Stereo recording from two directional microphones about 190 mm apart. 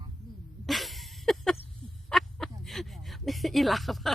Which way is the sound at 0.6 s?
Centre (ahead or behind).